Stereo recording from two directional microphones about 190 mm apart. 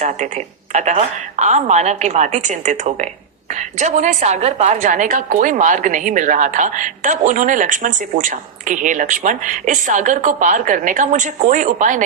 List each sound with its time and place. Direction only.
0.0 s a woman's voice: 40° right (ahead or behind)